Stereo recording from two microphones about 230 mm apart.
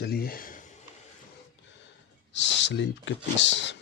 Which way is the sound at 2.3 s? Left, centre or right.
Left.